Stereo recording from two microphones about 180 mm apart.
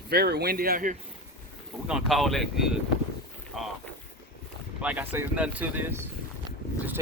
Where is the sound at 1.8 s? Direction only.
Centre (ahead or behind).